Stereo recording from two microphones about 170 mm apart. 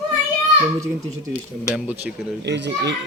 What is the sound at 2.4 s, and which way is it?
Speech, 90° right.